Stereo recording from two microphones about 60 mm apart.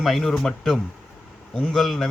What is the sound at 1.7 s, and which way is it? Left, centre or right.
Speech, centre.